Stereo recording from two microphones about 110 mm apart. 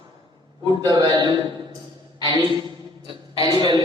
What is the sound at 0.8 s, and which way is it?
Speech, 40° right (ahead or behind).